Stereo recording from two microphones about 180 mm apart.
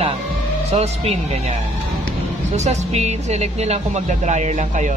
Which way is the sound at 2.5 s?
40° right (ahead or behind).